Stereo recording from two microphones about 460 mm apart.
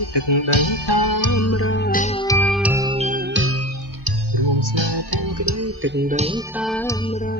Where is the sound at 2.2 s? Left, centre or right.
Centre; by 3.5 s right.